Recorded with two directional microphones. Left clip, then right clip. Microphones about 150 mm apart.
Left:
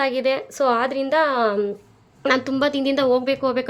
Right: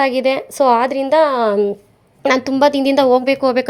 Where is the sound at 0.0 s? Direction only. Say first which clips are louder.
Right 5 dB; 30° right (ahead or behind).